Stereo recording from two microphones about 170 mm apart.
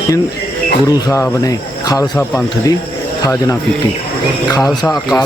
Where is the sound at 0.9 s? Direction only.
20° left (ahead or behind).